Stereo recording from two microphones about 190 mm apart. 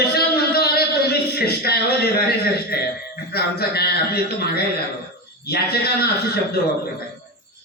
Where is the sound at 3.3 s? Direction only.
55° left (ahead or behind).